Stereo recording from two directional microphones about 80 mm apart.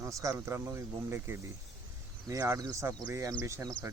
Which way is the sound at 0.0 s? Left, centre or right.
Right.